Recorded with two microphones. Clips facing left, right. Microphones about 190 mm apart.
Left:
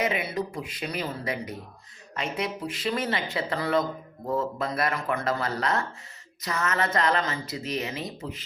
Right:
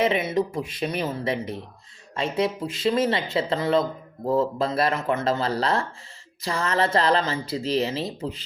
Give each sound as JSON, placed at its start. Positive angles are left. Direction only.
{"t": 0.0, "sound": "speech", "side_deg": -25}